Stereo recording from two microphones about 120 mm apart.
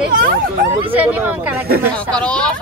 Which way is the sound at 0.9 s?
15° right (ahead or behind).